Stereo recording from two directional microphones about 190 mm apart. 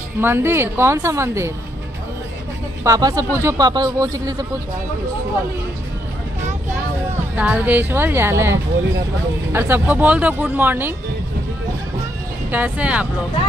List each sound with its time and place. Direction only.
0.2 s speech: 10° right (ahead or behind)
2.8 s speech: 20° right (ahead or behind)
7.3 s speech: 10° right (ahead or behind)
12.4 s speech: 10° right (ahead or behind)